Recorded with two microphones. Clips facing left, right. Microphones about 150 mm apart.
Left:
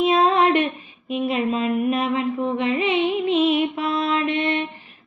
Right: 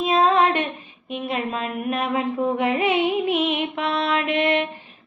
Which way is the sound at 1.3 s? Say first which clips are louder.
Left 4 dB; 45° right (ahead or behind).